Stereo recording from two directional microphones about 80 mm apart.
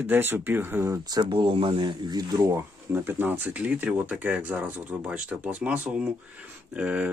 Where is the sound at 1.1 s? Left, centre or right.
Right.